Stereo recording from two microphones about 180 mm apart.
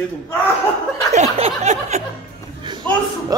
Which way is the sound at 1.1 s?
35° right (ahead or behind).